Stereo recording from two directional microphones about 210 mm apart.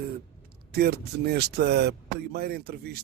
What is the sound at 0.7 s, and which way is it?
Speech, 50° right (ahead or behind).